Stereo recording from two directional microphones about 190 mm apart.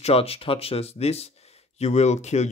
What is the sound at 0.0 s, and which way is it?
Speech, 30° left (ahead or behind).